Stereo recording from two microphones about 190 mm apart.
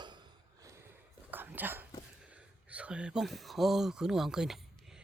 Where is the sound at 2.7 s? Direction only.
5° right (ahead or behind).